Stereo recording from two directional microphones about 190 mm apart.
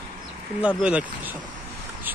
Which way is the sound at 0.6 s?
5° right (ahead or behind).